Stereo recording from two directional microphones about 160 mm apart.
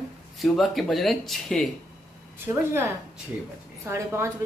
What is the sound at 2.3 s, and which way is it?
A woman's voice, 15° right (ahead or behind).